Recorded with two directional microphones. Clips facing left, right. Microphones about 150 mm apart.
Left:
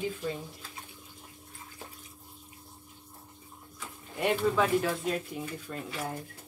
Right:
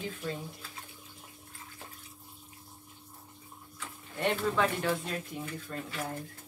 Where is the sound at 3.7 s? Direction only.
10° left (ahead or behind).